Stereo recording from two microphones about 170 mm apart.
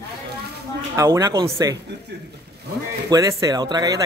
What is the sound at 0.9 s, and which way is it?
Speech, 20° right (ahead or behind).